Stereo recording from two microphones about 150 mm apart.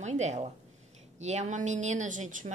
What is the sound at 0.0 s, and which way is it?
A woman's voice, 50° right (ahead or behind).